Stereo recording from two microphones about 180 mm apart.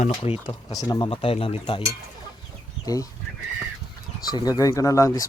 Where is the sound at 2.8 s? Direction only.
20° left (ahead or behind).